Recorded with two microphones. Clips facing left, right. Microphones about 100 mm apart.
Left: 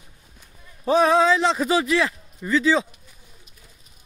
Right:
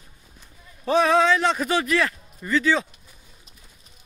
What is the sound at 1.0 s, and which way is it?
Speech, 30° left (ahead or behind).